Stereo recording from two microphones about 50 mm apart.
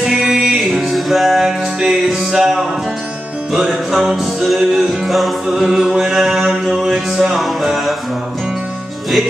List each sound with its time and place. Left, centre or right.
0.0 s music: centre